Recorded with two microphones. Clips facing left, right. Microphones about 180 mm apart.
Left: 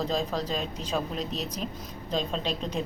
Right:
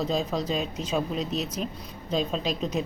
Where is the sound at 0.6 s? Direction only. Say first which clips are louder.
Right 3 dB; 35° left (ahead or behind).